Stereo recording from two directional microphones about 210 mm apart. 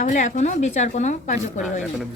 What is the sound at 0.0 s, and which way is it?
Speech, 35° left (ahead or behind).